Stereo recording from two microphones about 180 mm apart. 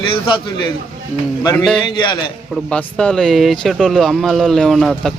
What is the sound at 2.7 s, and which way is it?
Speech, 5° left (ahead or behind).